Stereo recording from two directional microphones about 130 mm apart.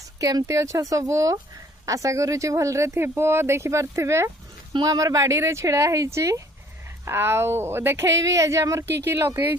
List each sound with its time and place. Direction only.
0.2 s speech: 25° right (ahead or behind)